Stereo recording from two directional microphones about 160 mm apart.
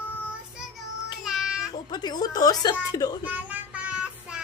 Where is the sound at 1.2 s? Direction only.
5° right (ahead or behind).